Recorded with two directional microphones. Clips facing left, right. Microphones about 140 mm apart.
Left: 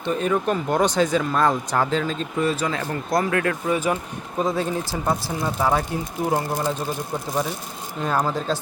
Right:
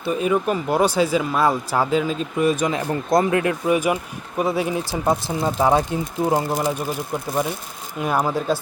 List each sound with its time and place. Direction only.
0.0 s speech: 10° right (ahead or behind)
7.9 s speech: 10° right (ahead or behind)